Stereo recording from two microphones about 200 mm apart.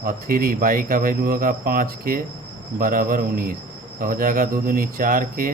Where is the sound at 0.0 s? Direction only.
45° right (ahead or behind).